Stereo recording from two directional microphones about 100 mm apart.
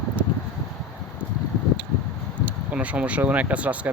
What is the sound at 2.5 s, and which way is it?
Speech, 15° right (ahead or behind).